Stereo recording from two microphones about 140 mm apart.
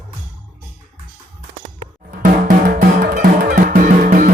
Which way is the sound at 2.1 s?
85° right.